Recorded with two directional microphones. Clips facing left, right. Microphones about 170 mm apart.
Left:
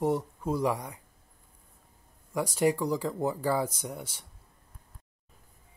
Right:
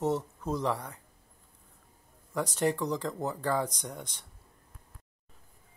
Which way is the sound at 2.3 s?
10° left (ahead or behind).